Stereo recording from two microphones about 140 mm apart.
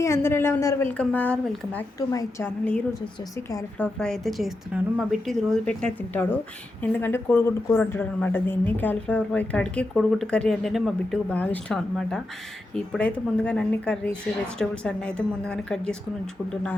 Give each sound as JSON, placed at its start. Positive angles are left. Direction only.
{"t": 0.0, "sound": "a woman's voice", "side_deg": 20}
{"t": 2.0, "sound": "a woman's voice", "side_deg": 25}
{"t": 3.8, "sound": "a woman's voice", "side_deg": 5}
{"t": 11.3, "sound": "a woman's voice", "side_deg": 10}